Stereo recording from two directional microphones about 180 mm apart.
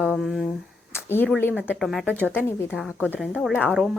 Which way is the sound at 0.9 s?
10° left (ahead or behind).